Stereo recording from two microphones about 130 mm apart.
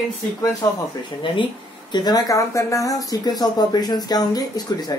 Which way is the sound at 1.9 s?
35° left (ahead or behind).